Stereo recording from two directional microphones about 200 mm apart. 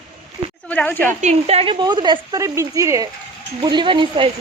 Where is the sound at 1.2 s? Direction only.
30° right (ahead or behind).